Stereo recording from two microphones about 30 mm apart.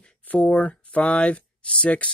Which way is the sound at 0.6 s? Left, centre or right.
Left.